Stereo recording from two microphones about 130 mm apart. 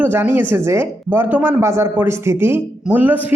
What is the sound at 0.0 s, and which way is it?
A woman's voice, 15° right (ahead or behind).